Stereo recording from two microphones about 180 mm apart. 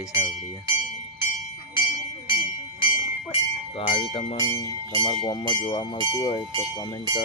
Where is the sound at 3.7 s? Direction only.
30° left (ahead or behind).